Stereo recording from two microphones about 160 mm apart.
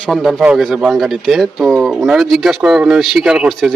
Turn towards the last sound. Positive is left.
turn(degrees=0)  # may be behind; listen again after turning